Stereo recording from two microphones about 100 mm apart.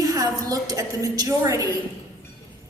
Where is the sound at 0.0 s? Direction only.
35° right (ahead or behind).